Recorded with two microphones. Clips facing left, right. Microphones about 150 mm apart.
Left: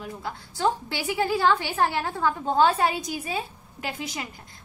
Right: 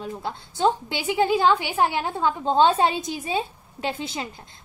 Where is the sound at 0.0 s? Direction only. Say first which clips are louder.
Right 3 dB; 25° right (ahead or behind).